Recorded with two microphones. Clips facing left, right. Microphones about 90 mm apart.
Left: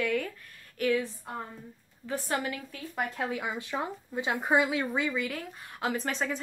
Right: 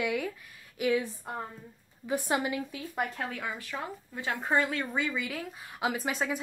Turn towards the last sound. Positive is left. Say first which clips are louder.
# even
turn(degrees=-5)  # may be behind; listen again after turning